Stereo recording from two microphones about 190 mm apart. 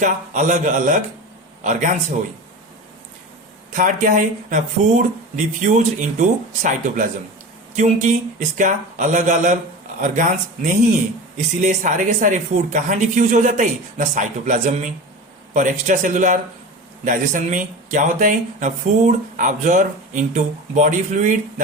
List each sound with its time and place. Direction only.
0.0 s speech: 40° right (ahead or behind)
3.8 s speech: 45° right (ahead or behind)